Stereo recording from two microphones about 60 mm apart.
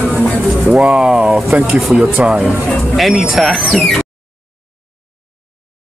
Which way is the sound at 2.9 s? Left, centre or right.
Centre.